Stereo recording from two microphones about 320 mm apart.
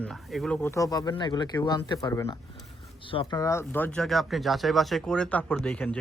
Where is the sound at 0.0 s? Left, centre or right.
Centre.